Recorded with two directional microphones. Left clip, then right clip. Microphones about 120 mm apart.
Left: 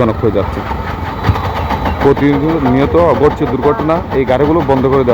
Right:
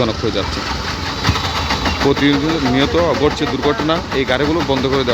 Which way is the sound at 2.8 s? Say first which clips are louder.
Left 6 dB; 10° left (ahead or behind).